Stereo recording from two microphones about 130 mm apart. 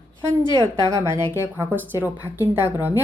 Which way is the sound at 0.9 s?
25° right (ahead or behind).